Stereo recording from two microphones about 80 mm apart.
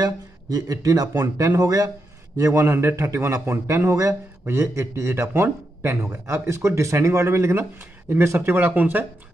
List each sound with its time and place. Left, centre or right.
0.0 s a man's voice: right
2.6 s speech: right
8.4 s speech: right